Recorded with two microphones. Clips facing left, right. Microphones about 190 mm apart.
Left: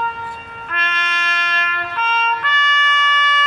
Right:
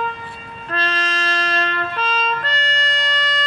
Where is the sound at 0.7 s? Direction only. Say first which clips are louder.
Right 3 dB; 35° right (ahead or behind).